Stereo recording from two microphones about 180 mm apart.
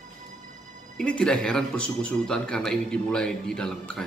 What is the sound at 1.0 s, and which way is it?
A man's voice, 5° left (ahead or behind).